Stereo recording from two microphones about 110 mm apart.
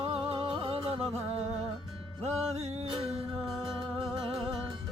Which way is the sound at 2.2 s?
80° right.